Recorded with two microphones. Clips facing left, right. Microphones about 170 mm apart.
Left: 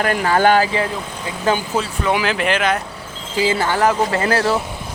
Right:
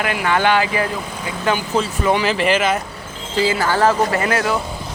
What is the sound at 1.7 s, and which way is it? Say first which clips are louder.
Speech: right 2 dB; centre (ahead or behind).